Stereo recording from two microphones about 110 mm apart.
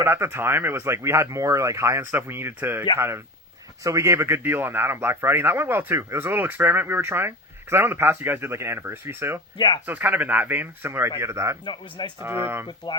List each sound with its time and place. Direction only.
0.0 s speech: 20° right (ahead or behind)
3.8 s speech: 25° right (ahead or behind)
9.6 s speech: 40° left (ahead or behind)
9.8 s speech: 15° right (ahead or behind)
11.6 s speech: 45° left (ahead or behind)
12.2 s speech: 20° right (ahead or behind)
12.6 s speech: 40° left (ahead or behind)